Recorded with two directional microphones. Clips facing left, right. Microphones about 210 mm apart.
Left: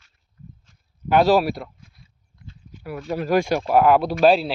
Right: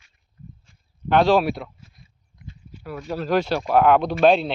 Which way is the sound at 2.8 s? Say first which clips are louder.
Left 2 dB; 10° left (ahead or behind).